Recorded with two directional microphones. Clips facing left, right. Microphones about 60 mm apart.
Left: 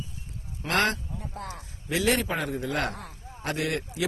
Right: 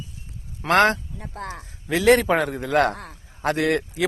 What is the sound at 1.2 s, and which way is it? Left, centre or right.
Speech, right.